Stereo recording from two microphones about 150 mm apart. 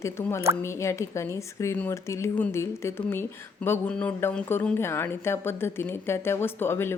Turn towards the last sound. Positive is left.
turn(degrees=15)  # may be behind; listen again after turning